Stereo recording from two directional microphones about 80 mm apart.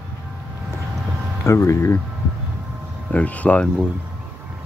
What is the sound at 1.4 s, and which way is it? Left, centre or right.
Speech, left.